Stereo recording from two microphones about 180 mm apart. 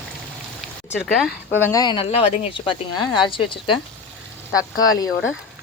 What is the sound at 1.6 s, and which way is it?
Speech, 20° left (ahead or behind).